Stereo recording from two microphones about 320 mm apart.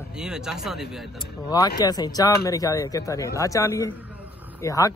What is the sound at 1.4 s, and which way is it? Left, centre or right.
Speech, centre.